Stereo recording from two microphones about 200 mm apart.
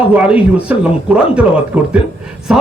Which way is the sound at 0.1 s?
5° right (ahead or behind).